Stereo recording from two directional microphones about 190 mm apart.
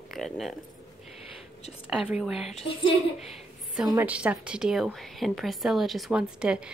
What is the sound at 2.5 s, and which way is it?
Speech, 30° left (ahead or behind).